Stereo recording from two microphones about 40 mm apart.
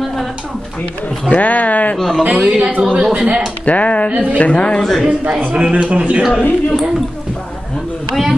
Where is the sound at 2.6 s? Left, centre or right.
Right.